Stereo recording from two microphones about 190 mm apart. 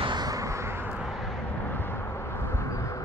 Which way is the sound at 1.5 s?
10° left (ahead or behind).